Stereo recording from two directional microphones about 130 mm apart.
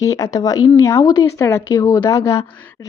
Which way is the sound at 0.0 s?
25° left (ahead or behind).